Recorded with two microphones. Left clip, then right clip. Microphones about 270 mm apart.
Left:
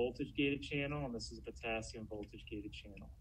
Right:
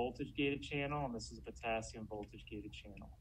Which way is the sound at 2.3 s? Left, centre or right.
Right.